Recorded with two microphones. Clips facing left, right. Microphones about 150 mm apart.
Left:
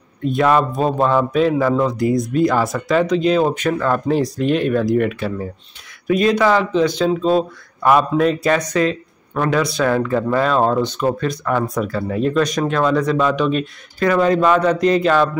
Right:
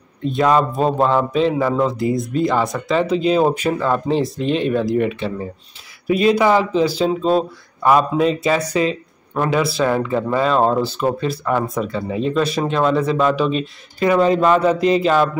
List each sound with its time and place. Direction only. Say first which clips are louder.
0.2 s a man's voice: even; centre (ahead or behind)
13.9 s a man's voice: right 1 dB; 15° right (ahead or behind)
14.2 s speech: even; 5° right (ahead or behind)